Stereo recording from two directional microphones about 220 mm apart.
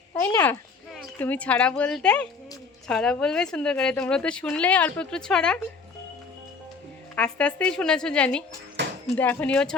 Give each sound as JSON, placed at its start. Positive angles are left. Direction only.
{"t": 0.2, "sound": "speech", "side_deg": 10}
{"t": 7.2, "sound": "speech", "side_deg": 5}
{"t": 8.8, "sound": "a sound", "side_deg": -55}
{"t": 9.1, "sound": "speech", "side_deg": 10}